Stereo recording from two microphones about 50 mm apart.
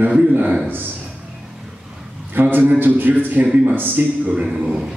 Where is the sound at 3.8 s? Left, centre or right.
Right.